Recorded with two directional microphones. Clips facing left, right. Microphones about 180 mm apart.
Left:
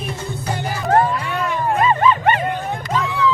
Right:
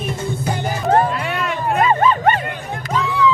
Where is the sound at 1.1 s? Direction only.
75° right (ahead or behind).